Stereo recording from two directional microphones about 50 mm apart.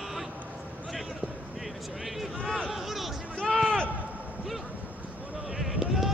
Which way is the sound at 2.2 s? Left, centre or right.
Centre.